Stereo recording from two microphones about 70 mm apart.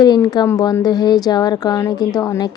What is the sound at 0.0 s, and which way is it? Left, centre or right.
Speech, left.